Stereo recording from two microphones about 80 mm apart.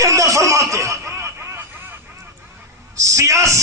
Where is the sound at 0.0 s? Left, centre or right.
Right.